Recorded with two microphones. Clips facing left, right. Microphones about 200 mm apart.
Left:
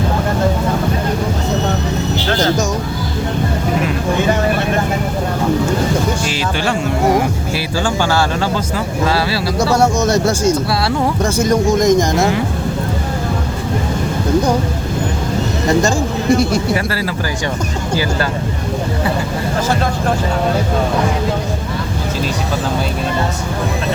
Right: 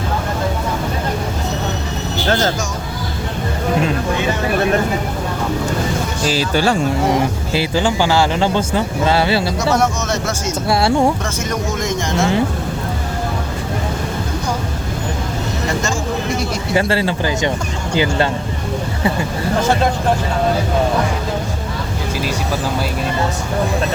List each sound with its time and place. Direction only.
6.2 s music: 35° right (ahead or behind)
7.5 s speech: 20° right (ahead or behind)
9.6 s speech: 30° left (ahead or behind)
16.7 s speech: 25° right (ahead or behind)